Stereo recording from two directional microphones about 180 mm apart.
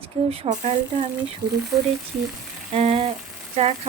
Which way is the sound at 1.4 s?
25° right (ahead or behind).